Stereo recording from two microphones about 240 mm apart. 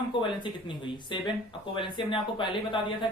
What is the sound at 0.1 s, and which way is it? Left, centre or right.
Speech, centre.